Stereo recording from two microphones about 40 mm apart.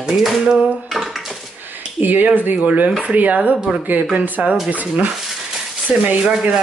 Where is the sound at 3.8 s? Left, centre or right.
Right.